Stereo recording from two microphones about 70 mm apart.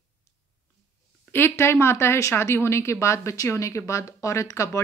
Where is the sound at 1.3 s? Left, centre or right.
Left.